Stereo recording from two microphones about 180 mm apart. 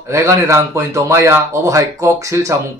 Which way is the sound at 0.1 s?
15° right (ahead or behind).